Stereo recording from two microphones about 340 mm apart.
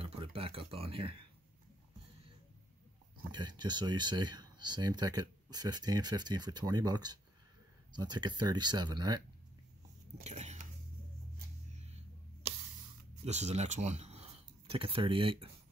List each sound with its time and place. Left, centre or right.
0.0 s speech: centre
3.3 s speech: centre
10.2 s speech: centre
13.2 s speech: centre